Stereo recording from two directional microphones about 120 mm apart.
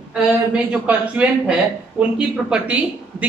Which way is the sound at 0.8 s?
10° right (ahead or behind).